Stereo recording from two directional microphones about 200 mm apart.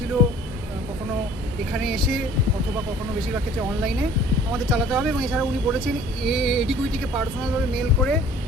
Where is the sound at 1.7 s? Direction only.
Centre (ahead or behind).